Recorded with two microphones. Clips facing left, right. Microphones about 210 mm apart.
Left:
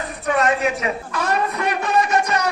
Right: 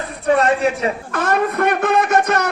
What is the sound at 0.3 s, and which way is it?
Speech, 30° right (ahead or behind).